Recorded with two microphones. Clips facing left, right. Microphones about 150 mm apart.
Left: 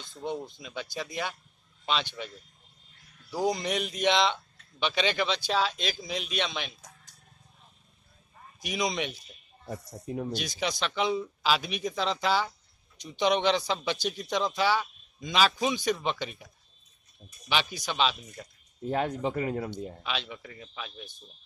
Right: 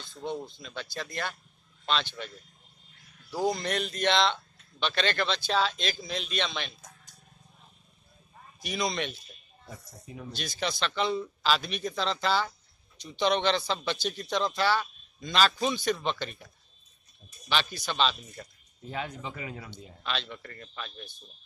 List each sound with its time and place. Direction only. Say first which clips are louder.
0.0 s speech: left 1 dB; 15° left (ahead or behind)
8.5 s speech: left 1 dB; 15° left (ahead or behind)
9.7 s speech: left 9 dB; 50° left (ahead or behind)
10.3 s speech: left 2 dB; 15° left (ahead or behind)
18.9 s speech: left 8 dB; 50° left (ahead or behind)
20.0 s speech: even; 10° left (ahead or behind)